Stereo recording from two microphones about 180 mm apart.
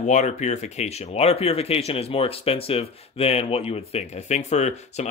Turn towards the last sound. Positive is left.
turn(degrees=40)  # may be behind; listen again after turning